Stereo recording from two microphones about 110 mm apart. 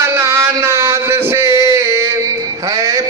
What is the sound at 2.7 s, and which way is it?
Music, 30° right (ahead or behind).